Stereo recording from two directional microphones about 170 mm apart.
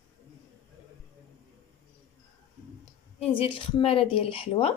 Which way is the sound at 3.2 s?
35° left (ahead or behind).